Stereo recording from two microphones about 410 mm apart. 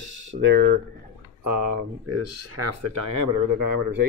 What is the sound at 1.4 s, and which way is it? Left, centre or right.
Speech, right.